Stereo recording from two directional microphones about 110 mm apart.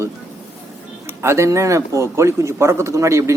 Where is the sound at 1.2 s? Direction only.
25° right (ahead or behind).